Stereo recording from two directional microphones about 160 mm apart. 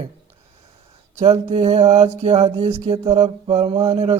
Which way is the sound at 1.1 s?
40° right (ahead or behind).